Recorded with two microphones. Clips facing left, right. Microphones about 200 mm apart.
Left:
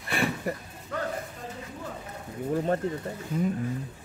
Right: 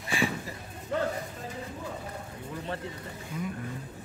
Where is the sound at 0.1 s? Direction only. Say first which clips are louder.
Left 2 dB; 60° left (ahead or behind).